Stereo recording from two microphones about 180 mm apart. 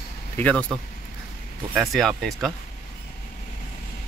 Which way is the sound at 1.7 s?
Centre (ahead or behind).